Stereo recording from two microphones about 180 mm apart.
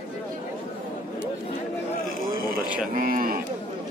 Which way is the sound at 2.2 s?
50° right (ahead or behind).